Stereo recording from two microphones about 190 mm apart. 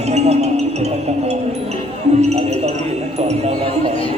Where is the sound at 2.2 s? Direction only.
35° right (ahead or behind).